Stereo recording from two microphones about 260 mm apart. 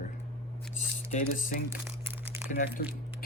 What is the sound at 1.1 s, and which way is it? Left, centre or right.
Speech, left.